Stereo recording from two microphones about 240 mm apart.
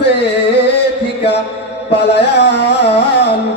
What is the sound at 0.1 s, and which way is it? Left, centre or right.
Music, left.